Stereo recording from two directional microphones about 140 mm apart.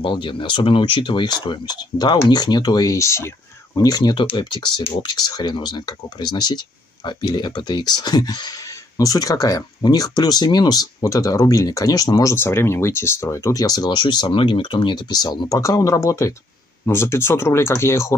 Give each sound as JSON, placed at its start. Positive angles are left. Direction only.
{"t": 0.0, "sound": "speech", "side_deg": 35}